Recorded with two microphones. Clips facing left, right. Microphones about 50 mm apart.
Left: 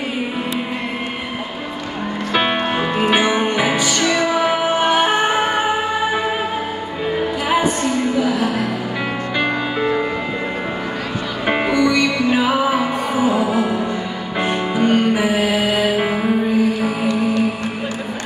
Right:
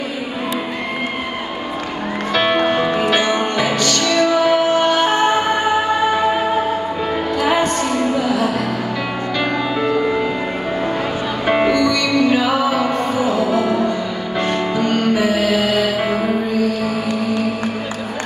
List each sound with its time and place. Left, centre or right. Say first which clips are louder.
2.3 s music: right 3 dB; centre
7.4 s music: right 1 dB; centre
9.4 s music: even; centre
11.4 s music: right 1 dB; centre